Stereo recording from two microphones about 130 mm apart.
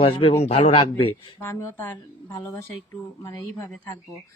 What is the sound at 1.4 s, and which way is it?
Speech, 15° left (ahead or behind).